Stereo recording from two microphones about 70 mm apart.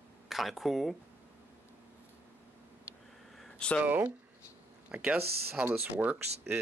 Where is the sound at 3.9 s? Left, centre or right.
Right.